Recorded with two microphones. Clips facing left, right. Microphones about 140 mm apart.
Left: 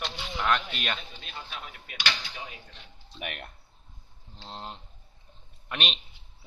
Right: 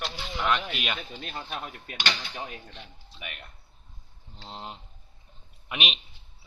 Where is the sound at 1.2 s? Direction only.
45° right (ahead or behind).